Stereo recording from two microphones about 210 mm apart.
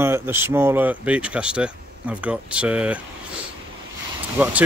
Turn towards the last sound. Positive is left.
turn(degrees=-5)  # may be behind; listen again after turning